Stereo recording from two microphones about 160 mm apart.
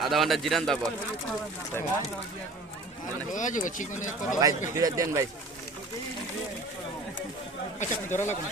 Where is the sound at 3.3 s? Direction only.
55° left (ahead or behind).